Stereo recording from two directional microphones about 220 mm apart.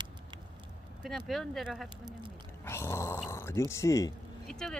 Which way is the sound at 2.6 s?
10° left (ahead or behind).